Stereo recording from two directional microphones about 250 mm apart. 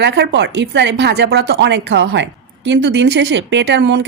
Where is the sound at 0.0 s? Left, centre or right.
Right.